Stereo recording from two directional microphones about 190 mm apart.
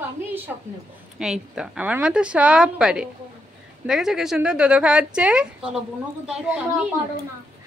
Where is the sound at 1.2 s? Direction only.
5° right (ahead or behind).